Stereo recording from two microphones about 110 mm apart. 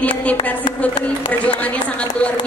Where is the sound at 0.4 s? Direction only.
45° left (ahead or behind).